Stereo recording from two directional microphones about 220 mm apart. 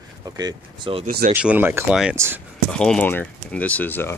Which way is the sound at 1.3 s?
5° right (ahead or behind).